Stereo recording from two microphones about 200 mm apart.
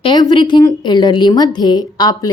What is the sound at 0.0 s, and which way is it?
A woman's voice, 20° left (ahead or behind).